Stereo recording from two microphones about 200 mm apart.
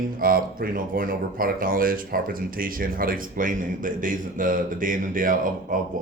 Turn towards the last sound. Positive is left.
turn(degrees=-40)  # may be behind; listen again after turning